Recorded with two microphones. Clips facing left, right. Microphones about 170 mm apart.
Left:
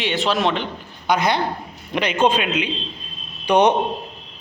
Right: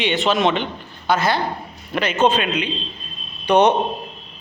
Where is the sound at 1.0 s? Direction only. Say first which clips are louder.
Even; 15° left (ahead or behind).